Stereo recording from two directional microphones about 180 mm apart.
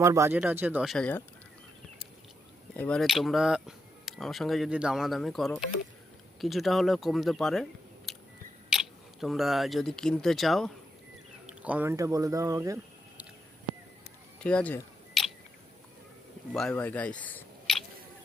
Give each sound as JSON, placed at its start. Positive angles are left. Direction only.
{"t": 0.0, "sound": "speech", "side_deg": -15}
{"t": 2.7, "sound": "speech", "side_deg": 5}
{"t": 9.2, "sound": "speech", "side_deg": 0}
{"t": 14.4, "sound": "speech", "side_deg": 5}
{"t": 16.5, "sound": "speech", "side_deg": 5}